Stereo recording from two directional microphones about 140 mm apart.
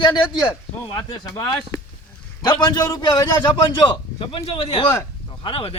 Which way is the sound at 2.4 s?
30° left (ahead or behind).